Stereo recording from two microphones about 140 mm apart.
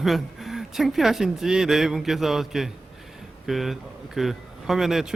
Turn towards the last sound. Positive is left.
turn(degrees=-5)  # may be behind; listen again after turning